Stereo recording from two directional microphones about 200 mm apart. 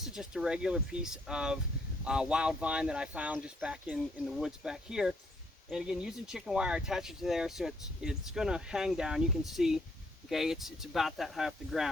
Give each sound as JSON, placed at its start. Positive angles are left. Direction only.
{"t": 0.0, "sound": "speech", "side_deg": 0}